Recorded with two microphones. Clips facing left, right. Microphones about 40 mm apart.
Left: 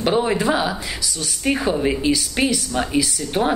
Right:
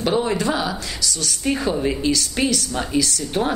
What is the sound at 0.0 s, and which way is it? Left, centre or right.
A woman's voice, centre.